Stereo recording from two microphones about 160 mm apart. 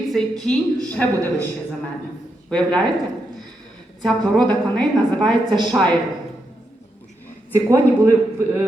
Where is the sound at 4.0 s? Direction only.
5° left (ahead or behind).